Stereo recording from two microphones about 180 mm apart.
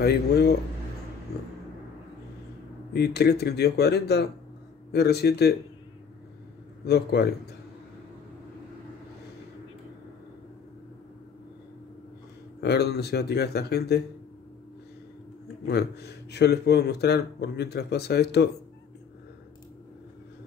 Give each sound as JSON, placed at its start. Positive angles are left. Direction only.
{"t": 0.0, "sound": "speech", "side_deg": 65}
{"t": 2.9, "sound": "speech", "side_deg": 65}
{"t": 6.9, "sound": "speech", "side_deg": 65}
{"t": 12.5, "sound": "speech", "side_deg": 65}
{"t": 15.6, "sound": "speech", "side_deg": 65}